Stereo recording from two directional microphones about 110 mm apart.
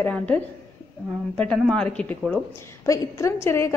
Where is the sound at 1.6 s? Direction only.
10° left (ahead or behind).